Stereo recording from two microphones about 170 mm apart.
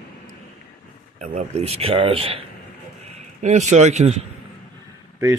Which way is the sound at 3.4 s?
45° right (ahead or behind).